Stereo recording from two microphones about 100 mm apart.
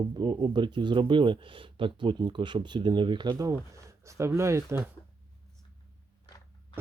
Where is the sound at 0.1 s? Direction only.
50° right (ahead or behind).